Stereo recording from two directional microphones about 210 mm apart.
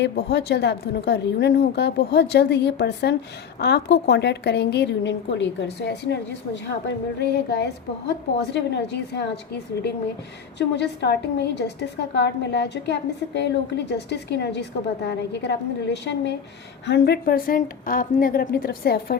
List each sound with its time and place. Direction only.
0.0 s a woman's voice: 55° left (ahead or behind)
10.6 s a woman's voice: 55° left (ahead or behind)